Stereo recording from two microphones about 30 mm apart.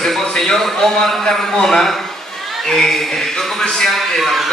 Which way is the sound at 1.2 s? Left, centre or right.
Centre.